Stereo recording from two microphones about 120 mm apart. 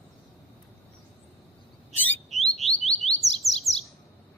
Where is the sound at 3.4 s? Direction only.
Centre (ahead or behind).